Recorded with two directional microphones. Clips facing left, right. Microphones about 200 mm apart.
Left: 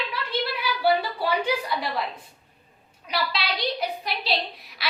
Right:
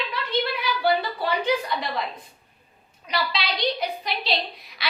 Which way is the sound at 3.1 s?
5° left (ahead or behind).